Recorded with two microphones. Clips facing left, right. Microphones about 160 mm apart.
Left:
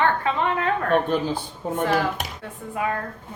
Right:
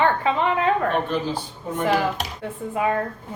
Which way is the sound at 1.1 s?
50° left (ahead or behind).